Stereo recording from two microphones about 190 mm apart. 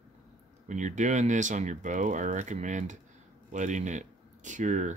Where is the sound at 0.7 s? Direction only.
40° right (ahead or behind).